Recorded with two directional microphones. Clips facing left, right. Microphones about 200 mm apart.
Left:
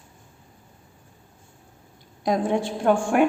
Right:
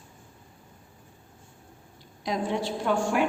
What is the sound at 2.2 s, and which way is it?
A woman's voice, 50° left (ahead or behind).